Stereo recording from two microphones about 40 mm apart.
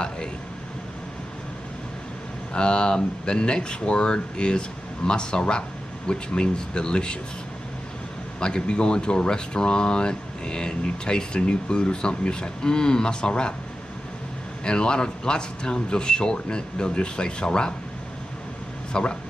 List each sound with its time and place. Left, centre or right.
2.5 s speech: left
8.4 s speech: left
14.6 s speech: left
18.9 s speech: centre